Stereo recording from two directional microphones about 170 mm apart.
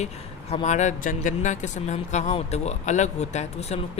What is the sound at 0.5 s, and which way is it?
A man's voice, 45° left (ahead or behind).